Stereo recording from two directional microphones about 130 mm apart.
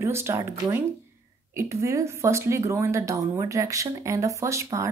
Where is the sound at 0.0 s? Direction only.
20° right (ahead or behind).